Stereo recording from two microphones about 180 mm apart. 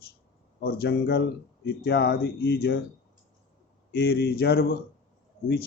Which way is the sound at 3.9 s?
60° left (ahead or behind).